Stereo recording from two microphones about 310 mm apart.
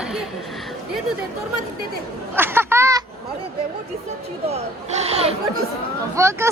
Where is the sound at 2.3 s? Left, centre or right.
Centre.